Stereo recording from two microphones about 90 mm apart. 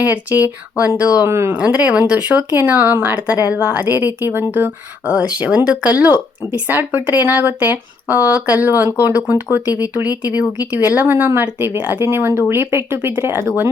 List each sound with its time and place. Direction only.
0.0 s speech: 20° right (ahead or behind)
1.3 s speech: 30° right (ahead or behind)
1.5 s speech: 15° right (ahead or behind)
5.4 s speech: 15° right (ahead or behind)